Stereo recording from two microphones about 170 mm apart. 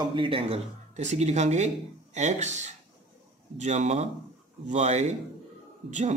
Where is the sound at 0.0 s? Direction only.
30° right (ahead or behind).